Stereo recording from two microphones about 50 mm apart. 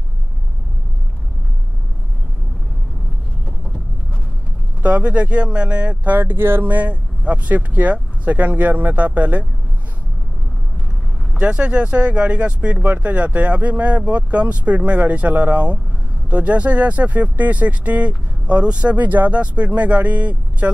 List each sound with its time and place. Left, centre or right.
4.8 s speech: right
6.1 s speech: right
6.7 s speech: right
11.3 s speech: right
18.9 s speech: right